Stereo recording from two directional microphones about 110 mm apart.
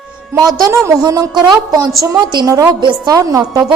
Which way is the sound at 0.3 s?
35° right (ahead or behind).